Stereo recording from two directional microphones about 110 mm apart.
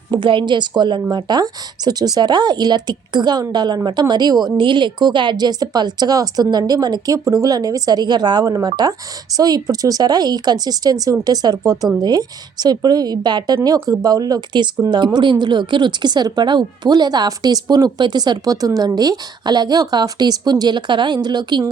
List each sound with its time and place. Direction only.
0.1 s a woman's voice: 50° right (ahead or behind)
13.7 s a woman's voice: 30° right (ahead or behind)